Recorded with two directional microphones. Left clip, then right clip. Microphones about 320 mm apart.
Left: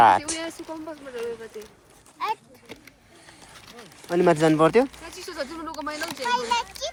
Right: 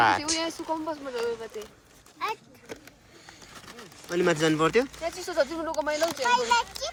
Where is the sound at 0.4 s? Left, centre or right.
Centre.